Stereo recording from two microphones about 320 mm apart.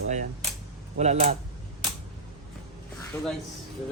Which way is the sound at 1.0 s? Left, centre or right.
Right.